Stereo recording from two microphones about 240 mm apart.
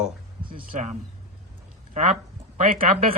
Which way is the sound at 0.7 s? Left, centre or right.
Right.